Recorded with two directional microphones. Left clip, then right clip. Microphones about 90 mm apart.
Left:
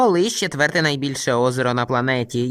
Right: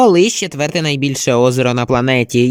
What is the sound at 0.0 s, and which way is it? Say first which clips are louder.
Speech: right 6 dB; 20° right (ahead or behind).